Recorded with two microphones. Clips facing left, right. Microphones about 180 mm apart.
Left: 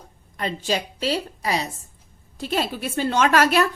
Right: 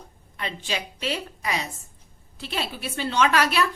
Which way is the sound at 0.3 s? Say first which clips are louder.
Left 6 dB; 40° left (ahead or behind).